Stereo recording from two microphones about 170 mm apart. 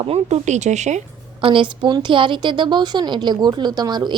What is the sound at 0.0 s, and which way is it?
A woman's voice, 35° right (ahead or behind).